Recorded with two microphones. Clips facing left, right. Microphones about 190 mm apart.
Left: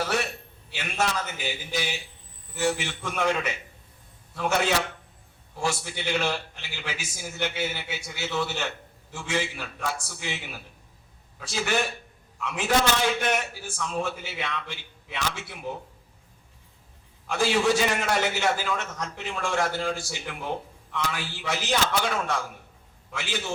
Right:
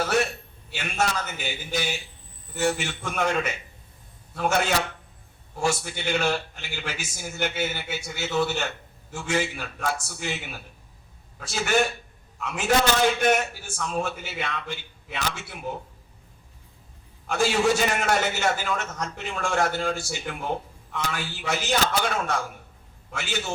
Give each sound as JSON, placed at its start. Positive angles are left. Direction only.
{"t": 0.7, "sound": "a man's voice", "side_deg": -45}
{"t": 17.2, "sound": "a man's voice", "side_deg": -45}